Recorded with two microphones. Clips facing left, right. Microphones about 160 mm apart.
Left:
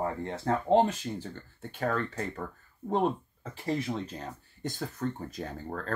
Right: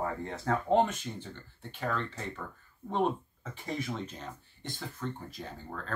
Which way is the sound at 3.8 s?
35° left (ahead or behind).